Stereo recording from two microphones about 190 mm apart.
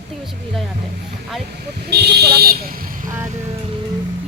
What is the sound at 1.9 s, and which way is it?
Speech, 60° right (ahead or behind).